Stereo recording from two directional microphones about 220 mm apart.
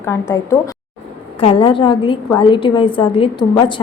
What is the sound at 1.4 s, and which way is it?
A woman's voice, 25° left (ahead or behind).